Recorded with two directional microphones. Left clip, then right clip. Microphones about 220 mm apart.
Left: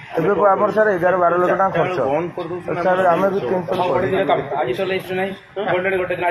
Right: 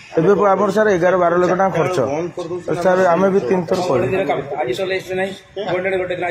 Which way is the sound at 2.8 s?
65° right (ahead or behind).